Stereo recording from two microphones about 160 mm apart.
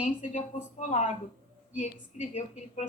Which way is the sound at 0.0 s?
50° left (ahead or behind).